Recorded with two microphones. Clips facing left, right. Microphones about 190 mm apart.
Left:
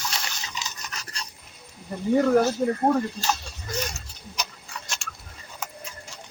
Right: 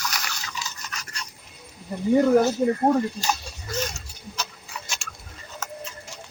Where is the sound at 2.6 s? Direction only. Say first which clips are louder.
Right 2 dB; 10° right (ahead or behind).